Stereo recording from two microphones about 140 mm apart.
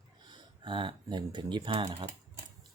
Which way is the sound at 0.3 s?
35° right (ahead or behind).